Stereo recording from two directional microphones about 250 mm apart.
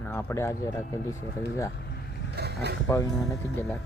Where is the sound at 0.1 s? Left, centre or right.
Centre.